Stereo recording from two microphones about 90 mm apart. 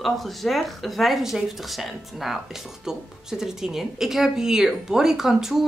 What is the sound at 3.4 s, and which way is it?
Speech, 5° right (ahead or behind).